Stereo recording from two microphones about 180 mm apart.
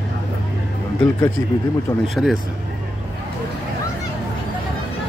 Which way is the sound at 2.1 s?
Centre (ahead or behind).